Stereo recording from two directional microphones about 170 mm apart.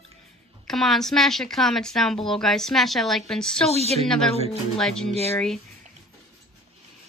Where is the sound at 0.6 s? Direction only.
Centre (ahead or behind).